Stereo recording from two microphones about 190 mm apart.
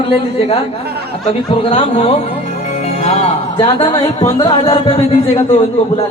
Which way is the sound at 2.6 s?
35° left (ahead or behind).